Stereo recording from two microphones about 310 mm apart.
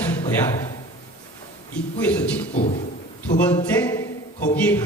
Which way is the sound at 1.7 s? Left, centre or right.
Centre.